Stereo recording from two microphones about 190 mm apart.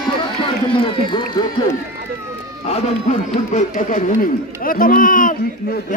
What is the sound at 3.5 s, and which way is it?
A man's voice, 40° left (ahead or behind).